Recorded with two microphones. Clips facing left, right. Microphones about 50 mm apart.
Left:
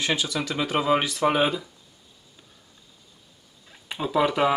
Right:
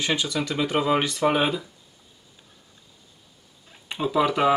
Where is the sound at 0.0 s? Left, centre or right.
Centre.